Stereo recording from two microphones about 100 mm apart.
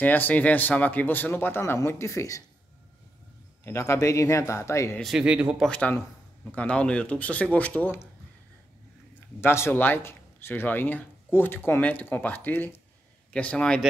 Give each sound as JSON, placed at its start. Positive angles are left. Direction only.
{"t": 0.0, "sound": "a man's voice", "side_deg": 15}
{"t": 3.6, "sound": "speech", "side_deg": 30}
{"t": 5.0, "sound": "speech", "side_deg": -10}
{"t": 5.7, "sound": "a man's voice", "side_deg": 15}
{"t": 9.4, "sound": "a man's voice", "side_deg": 25}